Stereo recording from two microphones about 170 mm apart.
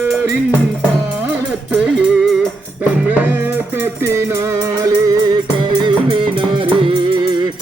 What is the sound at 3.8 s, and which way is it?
Music, 15° right (ahead or behind).